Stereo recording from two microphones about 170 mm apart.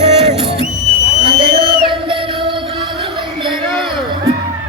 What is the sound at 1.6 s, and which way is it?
Music, 30° right (ahead or behind).